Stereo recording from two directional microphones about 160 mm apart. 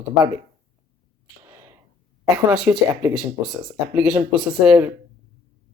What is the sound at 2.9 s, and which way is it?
Speech, 15° right (ahead or behind).